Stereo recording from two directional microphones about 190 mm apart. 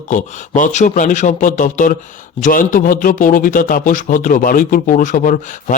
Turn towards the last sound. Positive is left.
turn(degrees=45)  # may be behind; listen again after turning